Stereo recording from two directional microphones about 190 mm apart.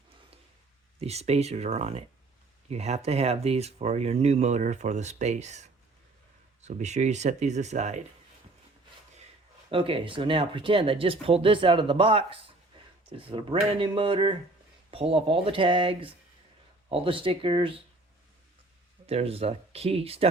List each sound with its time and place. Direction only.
0.9 s speech: 35° right (ahead or behind)
9.6 s speech: 30° right (ahead or behind)
19.0 s speech: 30° right (ahead or behind)